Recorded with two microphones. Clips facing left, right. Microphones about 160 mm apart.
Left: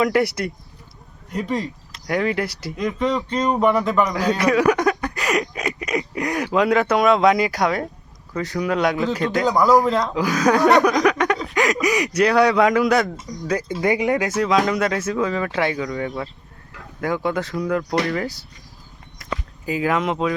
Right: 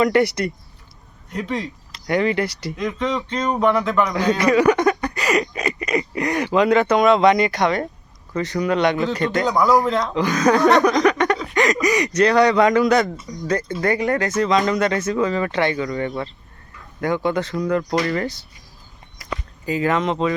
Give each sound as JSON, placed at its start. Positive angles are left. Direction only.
{"t": 0.0, "sound": "speech", "side_deg": 0}
{"t": 13.8, "sound": "speech", "side_deg": 20}
{"t": 14.3, "sound": "speech", "side_deg": 5}